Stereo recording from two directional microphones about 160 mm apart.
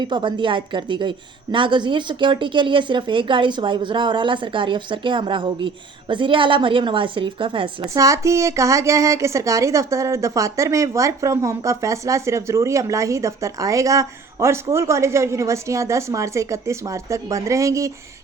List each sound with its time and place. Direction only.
0.0 s a woman's voice: 30° right (ahead or behind)
7.9 s a woman's voice: 20° right (ahead or behind)